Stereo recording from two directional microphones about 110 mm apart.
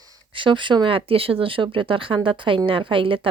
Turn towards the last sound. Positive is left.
turn(degrees=-50)  # may be behind; listen again after turning